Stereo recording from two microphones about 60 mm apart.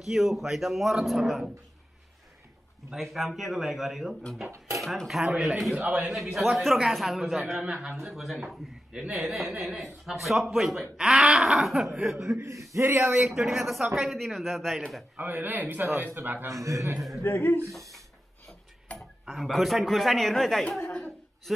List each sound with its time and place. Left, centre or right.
0.0 s speech: centre
2.9 s speech: centre
5.9 s a man's voice: centre
6.3 s speech: centre
12.4 s speech: right
13.1 s speech: centre
15.1 s a man's voice: right
16.6 s speech: right
17.2 s speech: left
18.9 s speech: centre